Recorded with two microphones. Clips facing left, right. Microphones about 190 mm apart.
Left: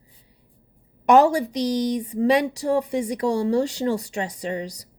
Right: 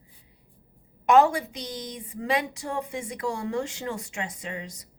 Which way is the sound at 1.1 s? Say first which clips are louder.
Left 4 dB; 40° left (ahead or behind).